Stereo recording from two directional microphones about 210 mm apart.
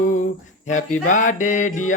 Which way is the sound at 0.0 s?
40° left (ahead or behind).